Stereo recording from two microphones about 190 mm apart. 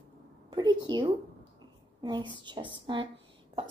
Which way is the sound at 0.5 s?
20° right (ahead or behind).